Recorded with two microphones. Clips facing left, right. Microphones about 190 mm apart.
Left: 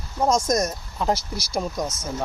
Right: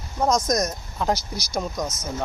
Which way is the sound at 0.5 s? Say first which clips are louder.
Left 1 dB; 5° left (ahead or behind).